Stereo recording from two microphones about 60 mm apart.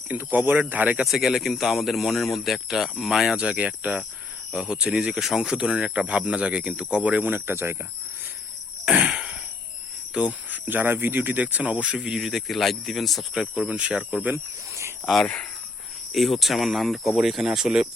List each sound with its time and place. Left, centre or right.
0.1 s speech: right
1.0 s speech: centre
3.3 s speech: centre; by 7.8 s right
8.8 s wheeze: centre
10.2 s speech: right; by 13.7 s centre
13.7 s speech: centre
14.3 s speech: right
15.0 s speech: centre